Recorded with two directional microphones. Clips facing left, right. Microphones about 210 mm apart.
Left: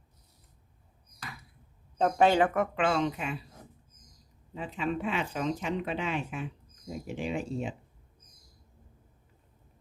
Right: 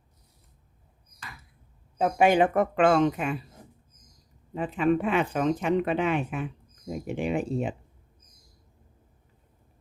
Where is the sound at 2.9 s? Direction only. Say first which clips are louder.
Right 7 dB; 55° right (ahead or behind).